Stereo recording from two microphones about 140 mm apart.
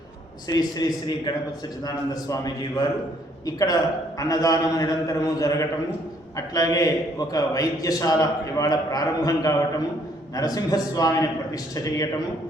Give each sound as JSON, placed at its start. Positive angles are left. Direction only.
{"t": 0.4, "sound": "a man's voice", "side_deg": 25}